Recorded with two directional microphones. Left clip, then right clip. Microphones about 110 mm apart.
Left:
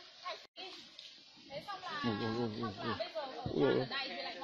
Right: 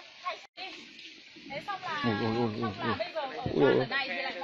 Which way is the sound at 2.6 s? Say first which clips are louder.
Right 7 dB; 25° right (ahead or behind).